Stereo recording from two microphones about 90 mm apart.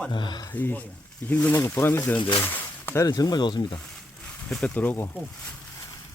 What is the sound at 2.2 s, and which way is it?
Speech, 65° left (ahead or behind).